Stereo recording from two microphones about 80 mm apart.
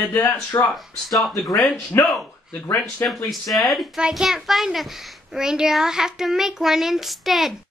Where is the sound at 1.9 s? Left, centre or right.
Left.